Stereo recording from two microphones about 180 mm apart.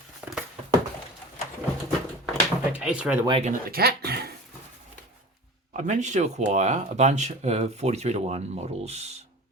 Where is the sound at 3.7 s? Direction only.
60° right (ahead or behind).